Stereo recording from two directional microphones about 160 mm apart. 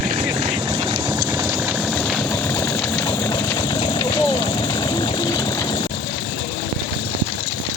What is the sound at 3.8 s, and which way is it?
Vehicle, 25° left (ahead or behind).